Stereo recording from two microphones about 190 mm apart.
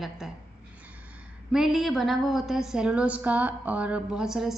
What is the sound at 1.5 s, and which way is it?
A woman's voice, centre (ahead or behind).